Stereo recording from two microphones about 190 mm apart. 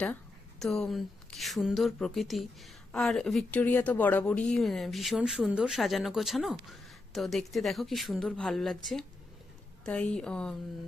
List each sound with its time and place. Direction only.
0.6 s speech: centre (ahead or behind)